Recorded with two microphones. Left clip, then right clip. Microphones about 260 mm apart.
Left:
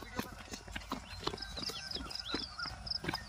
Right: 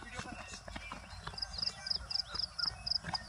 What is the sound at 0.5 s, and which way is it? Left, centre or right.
Clip-clop, left.